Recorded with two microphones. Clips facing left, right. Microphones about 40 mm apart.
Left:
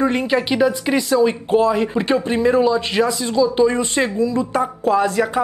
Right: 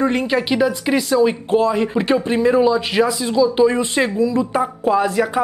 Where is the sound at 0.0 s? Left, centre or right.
Centre.